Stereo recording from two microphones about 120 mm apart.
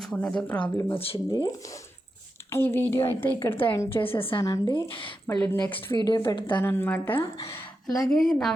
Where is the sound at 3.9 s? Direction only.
50° left (ahead or behind).